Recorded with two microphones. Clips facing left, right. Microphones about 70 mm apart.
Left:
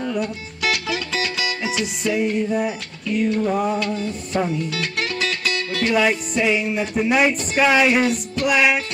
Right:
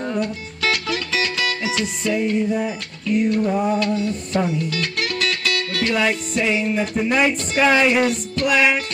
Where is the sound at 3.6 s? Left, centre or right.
Centre.